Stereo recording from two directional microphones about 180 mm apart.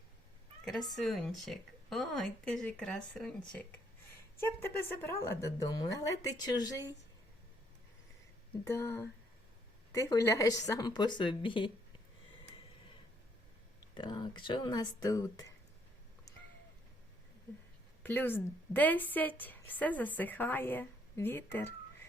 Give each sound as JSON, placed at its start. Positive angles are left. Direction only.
{"t": 0.6, "sound": "a woman's voice", "side_deg": 0}
{"t": 8.6, "sound": "a woman's voice", "side_deg": 15}
{"t": 13.9, "sound": "a woman's voice", "side_deg": 25}
{"t": 18.0, "sound": "a woman's voice", "side_deg": 10}